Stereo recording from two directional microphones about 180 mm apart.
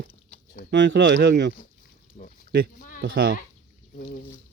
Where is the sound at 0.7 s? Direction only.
80° right.